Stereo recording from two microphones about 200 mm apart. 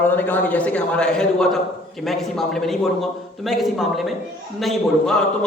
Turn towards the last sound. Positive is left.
turn(degrees=5)  # may be behind; listen again after turning